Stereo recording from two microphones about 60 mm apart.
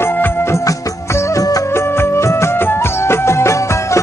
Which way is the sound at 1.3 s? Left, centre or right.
Left.